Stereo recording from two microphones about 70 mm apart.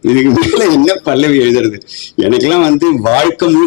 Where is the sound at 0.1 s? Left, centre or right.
Left.